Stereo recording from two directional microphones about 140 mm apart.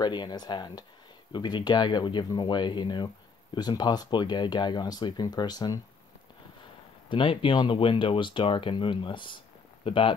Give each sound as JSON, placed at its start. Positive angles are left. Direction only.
{"t": 0.0, "sound": "speech", "side_deg": 30}
{"t": 7.1, "sound": "speech", "side_deg": 35}